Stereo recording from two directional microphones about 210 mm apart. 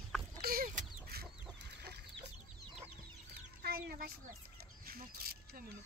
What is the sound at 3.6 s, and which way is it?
Speech, 45° right (ahead or behind).